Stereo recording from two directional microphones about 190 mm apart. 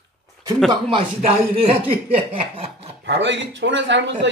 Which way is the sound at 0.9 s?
30° right (ahead or behind).